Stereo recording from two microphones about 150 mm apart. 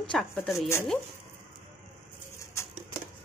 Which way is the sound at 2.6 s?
20° left (ahead or behind).